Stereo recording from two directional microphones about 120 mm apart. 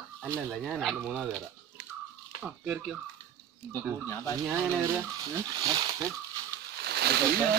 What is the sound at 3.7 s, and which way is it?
Speech, 20° left (ahead or behind).